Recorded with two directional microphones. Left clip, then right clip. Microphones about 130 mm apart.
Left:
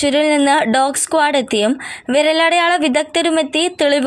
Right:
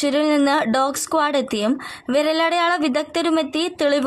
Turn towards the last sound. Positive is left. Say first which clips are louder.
# left 5 dB
turn(degrees=15)  # may be behind; listen again after turning